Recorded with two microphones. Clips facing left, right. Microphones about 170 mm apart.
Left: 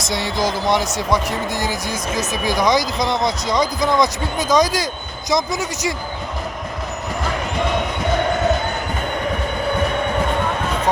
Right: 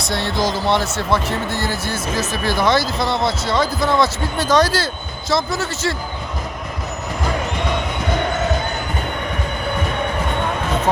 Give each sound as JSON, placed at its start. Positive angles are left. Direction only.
{"t": 0.1, "sound": "speech", "side_deg": -60}
{"t": 0.6, "sound": "speech", "side_deg": 15}